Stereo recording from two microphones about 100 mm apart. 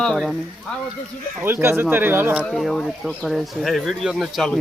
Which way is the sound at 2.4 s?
Centre (ahead or behind).